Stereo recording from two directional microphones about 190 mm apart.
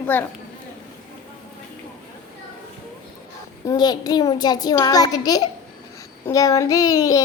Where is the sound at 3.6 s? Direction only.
20° left (ahead or behind).